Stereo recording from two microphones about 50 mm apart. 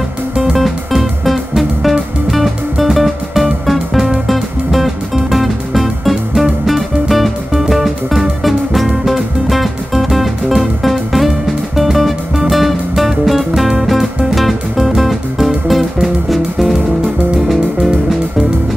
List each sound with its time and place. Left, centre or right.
0.5 s music: centre